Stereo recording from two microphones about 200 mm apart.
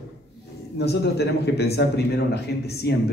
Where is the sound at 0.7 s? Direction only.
55° left (ahead or behind).